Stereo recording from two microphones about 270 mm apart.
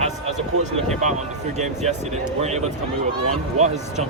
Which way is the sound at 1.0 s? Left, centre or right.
Right.